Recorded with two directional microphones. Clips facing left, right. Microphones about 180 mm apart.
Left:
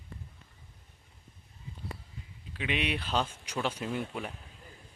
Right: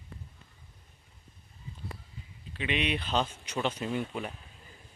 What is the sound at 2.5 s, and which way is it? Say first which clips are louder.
Speech: right 1 dB; 5° left (ahead or behind).